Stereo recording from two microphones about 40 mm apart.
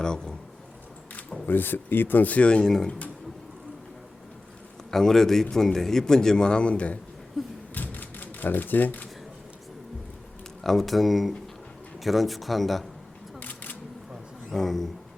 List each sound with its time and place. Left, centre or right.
0.0 s speech: centre
1.5 s speech: left
2.4 s speech: left
2.6 s a man's voice: centre
4.9 s a man's voice: centre; by 7.0 s left
7.7 s typewriter: left
10.6 s a man's voice: centre
13.4 s a sound: left
14.5 s a man's voice: centre